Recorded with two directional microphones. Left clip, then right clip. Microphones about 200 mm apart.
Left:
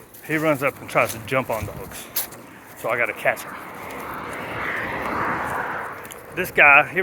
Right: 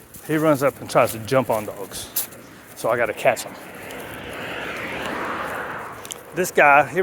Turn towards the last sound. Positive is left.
turn(degrees=-40)  # may be behind; listen again after turning